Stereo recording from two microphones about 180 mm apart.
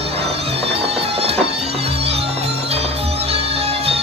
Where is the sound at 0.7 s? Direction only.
35° right (ahead or behind).